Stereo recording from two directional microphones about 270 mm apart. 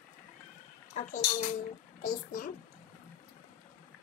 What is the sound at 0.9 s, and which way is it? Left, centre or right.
A woman's voice, left.